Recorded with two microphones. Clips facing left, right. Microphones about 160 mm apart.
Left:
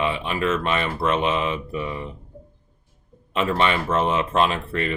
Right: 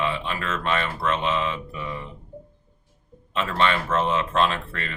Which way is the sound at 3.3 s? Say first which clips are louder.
Left 2 dB; 15° left (ahead or behind).